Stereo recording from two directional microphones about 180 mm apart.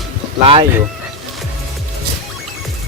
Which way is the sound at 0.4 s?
30° right (ahead or behind).